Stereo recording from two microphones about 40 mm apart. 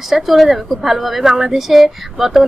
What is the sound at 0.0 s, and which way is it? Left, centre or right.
A woman's voice, centre.